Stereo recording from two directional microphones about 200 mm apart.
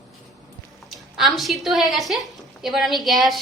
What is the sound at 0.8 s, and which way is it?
A woman's voice, centre (ahead or behind).